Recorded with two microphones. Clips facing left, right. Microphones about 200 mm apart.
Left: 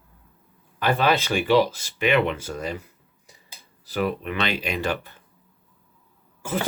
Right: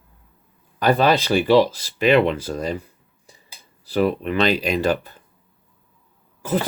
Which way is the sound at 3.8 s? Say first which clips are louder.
Right 6 dB; 35° right (ahead or behind).